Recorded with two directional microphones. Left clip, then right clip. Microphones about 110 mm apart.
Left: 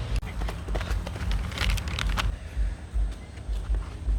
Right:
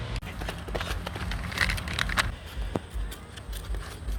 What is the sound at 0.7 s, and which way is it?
Clip-clop, 70° right (ahead or behind).